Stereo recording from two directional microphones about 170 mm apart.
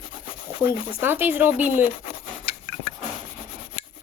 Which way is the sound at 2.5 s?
40° left (ahead or behind).